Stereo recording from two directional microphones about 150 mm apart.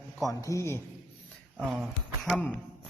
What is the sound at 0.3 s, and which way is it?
Speech, 20° left (ahead or behind).